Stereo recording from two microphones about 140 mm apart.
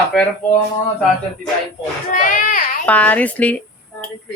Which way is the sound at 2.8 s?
10° left (ahead or behind).